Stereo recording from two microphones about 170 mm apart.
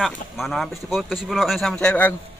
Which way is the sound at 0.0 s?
Centre (ahead or behind).